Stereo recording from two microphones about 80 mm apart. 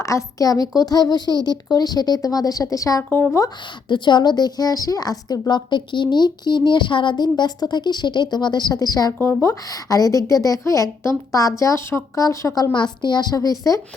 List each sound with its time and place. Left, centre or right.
0.0 s a woman's voice: left
3.1 s speech: left
3.8 s a woman's voice: left
9.2 s a woman's voice: left
12.7 s a woman's voice: left